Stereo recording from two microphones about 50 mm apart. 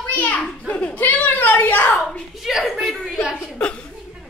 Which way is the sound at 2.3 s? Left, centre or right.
Centre.